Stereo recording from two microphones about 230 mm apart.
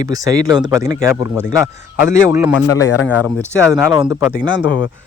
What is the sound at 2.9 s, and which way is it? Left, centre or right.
Speech, left.